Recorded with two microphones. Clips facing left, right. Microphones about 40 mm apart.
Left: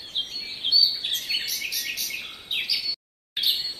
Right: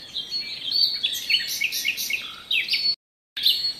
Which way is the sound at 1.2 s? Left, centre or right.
Right.